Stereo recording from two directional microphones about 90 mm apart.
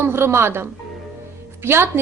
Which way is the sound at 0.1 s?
30° right (ahead or behind).